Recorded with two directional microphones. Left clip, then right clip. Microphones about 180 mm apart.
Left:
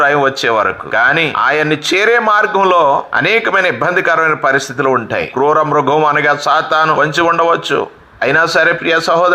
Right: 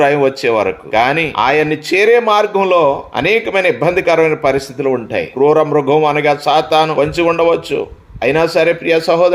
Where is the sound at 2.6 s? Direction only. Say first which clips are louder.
Left 3 dB; 40° left (ahead or behind).